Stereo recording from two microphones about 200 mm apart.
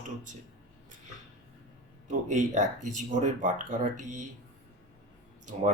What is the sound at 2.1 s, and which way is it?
Speech, 40° right (ahead or behind).